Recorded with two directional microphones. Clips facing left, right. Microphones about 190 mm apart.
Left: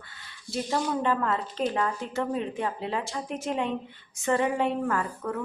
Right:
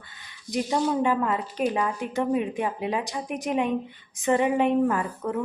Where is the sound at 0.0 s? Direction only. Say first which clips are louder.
Right 1 dB; 20° right (ahead or behind).